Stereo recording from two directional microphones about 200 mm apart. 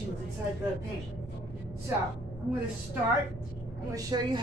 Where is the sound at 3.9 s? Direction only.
20° right (ahead or behind).